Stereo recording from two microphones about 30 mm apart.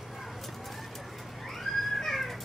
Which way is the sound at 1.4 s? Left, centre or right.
Centre.